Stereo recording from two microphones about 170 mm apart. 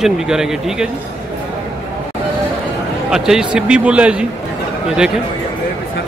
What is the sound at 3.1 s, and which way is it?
Speech, 5° right (ahead or behind).